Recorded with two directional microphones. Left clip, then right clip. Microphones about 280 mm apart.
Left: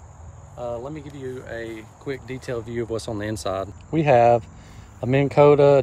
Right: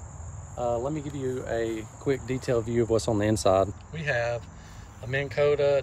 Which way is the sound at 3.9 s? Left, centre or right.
Centre.